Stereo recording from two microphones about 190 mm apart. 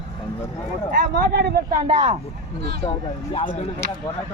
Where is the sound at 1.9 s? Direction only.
30° right (ahead or behind).